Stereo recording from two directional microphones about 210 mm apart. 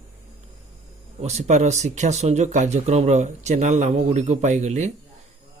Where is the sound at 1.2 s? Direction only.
30° right (ahead or behind).